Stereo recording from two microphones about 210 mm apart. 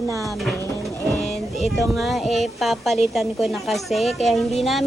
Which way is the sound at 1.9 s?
Centre (ahead or behind).